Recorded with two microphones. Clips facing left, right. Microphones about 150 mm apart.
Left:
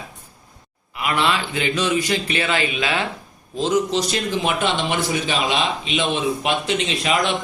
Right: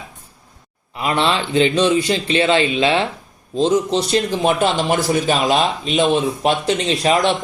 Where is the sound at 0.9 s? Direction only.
30° right (ahead or behind).